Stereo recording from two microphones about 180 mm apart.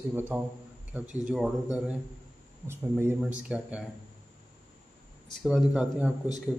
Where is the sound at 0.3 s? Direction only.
5° right (ahead or behind).